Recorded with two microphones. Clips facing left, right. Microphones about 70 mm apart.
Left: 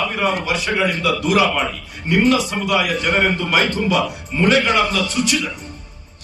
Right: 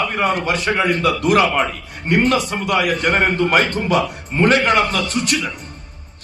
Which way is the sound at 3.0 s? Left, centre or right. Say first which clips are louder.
Right 2 dB; right.